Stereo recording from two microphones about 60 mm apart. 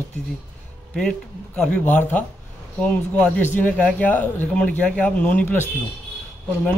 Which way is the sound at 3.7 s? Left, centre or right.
Left.